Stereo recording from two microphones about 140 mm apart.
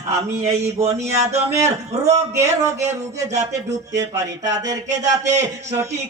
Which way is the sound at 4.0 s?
25° right (ahead or behind).